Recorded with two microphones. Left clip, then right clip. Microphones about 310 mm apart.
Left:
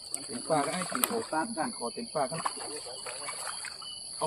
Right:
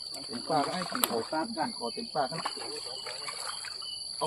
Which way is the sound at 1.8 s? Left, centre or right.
Centre.